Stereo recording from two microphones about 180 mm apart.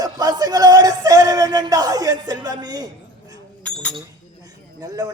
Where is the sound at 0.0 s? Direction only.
20° right (ahead or behind).